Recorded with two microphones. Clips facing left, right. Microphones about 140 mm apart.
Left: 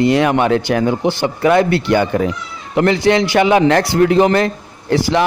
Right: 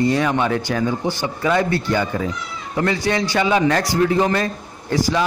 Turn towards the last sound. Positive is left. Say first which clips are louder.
# left 4 dB
turn(degrees=70)  # may be behind; listen again after turning